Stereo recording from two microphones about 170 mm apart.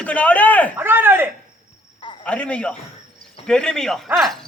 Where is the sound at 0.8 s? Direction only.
10° right (ahead or behind).